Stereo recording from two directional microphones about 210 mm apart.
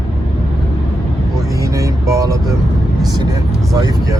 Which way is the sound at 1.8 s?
15° right (ahead or behind).